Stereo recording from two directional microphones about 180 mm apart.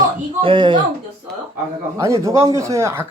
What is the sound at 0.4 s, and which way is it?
Speech, 30° right (ahead or behind).